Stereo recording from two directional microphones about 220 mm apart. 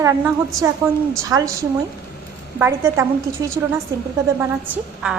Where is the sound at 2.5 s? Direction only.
10° right (ahead or behind).